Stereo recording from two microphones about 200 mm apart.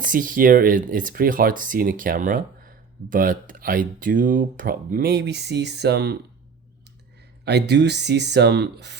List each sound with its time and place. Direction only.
0.0 s speech: 40° right (ahead or behind)
7.4 s speech: 60° right (ahead or behind)